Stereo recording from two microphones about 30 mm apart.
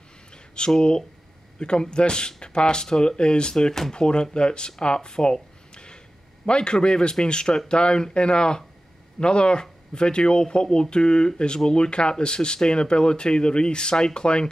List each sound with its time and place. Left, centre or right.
0.6 s speech: left